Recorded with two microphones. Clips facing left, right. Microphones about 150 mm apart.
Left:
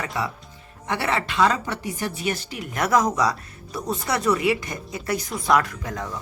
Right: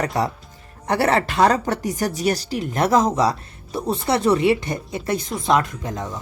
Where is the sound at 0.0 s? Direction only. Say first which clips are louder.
Right 6 dB; 40° right (ahead or behind).